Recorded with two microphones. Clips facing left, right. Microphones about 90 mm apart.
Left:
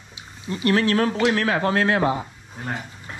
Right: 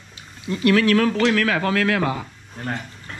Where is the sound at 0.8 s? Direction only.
25° left (ahead or behind).